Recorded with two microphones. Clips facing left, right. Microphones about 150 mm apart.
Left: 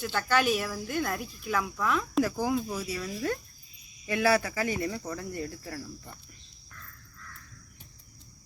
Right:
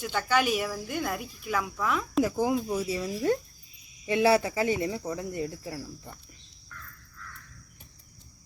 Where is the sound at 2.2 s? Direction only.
20° right (ahead or behind).